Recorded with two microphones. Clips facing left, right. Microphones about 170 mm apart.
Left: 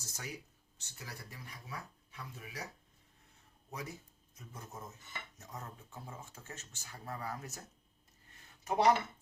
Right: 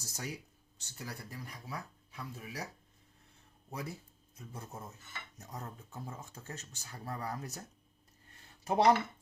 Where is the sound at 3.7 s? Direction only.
30° right (ahead or behind).